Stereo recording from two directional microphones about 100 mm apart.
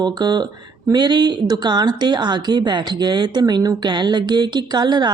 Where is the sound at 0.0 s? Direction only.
45° right (ahead or behind).